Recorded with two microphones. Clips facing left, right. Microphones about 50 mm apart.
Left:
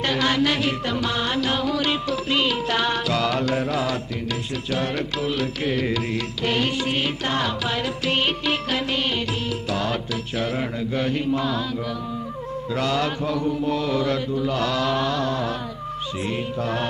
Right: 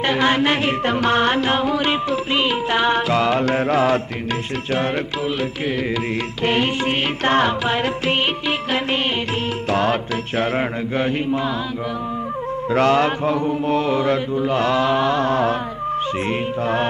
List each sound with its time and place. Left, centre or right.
0.0 s music: right
6.4 s music: right
9.7 s music: right
12.7 s music: right